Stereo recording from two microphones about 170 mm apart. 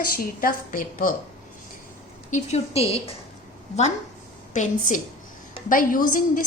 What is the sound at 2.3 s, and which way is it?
Speech, 40° left (ahead or behind).